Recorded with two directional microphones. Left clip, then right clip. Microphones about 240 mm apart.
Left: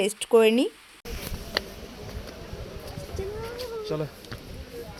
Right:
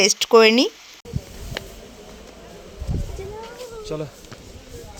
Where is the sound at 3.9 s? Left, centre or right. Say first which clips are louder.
Right 2 dB; centre.